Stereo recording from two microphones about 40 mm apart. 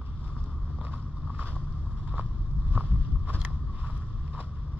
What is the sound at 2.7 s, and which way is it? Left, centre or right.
Boat, right.